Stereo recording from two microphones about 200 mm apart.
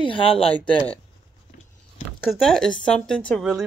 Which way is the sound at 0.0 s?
25° left (ahead or behind).